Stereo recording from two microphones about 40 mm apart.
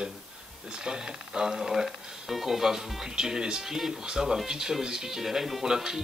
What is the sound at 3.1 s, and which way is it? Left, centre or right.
Speech, centre.